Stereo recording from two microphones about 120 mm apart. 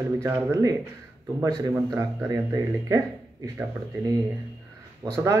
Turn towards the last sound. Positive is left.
turn(degrees=-25)  # may be behind; listen again after turning